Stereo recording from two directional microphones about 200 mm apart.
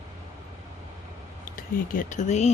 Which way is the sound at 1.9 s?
40° left (ahead or behind).